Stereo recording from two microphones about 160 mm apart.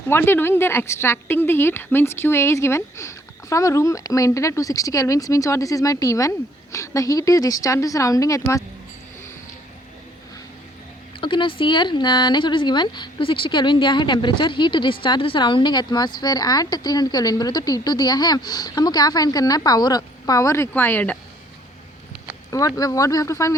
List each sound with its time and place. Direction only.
0.1 s speech: 15° left (ahead or behind)
11.2 s speech: 30° left (ahead or behind); by 21.2 s 10° left (ahead or behind)
22.5 s speech: 20° left (ahead or behind)